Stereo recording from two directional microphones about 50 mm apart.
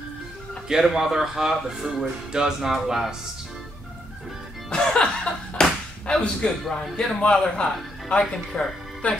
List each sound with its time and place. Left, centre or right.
0.7 s speech: centre
4.6 s slap: centre
6.7 s a man's voice: centre